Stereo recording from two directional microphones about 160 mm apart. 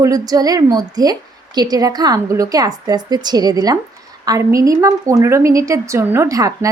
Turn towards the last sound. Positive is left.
turn(degrees=-20)  # may be behind; listen again after turning